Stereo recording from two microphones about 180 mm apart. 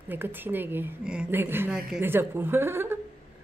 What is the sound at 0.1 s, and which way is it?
A woman's voice, 10° right (ahead or behind).